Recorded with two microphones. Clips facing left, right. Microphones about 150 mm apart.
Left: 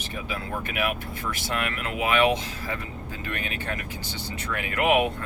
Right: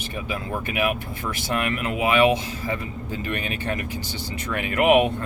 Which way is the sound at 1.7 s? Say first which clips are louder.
Right 3 dB; 15° right (ahead or behind).